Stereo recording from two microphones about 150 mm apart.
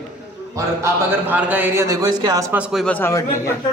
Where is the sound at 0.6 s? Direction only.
15° right (ahead or behind).